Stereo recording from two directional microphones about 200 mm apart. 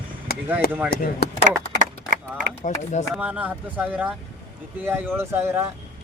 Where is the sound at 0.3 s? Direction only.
50° left (ahead or behind).